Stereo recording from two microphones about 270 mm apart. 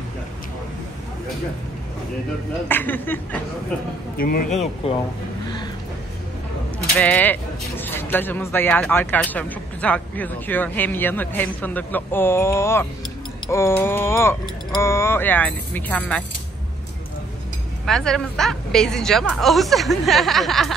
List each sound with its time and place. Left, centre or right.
2.7 s speech: centre
4.8 s speech: left
7.0 s a woman's voice: centre
17.8 s a woman's voice: centre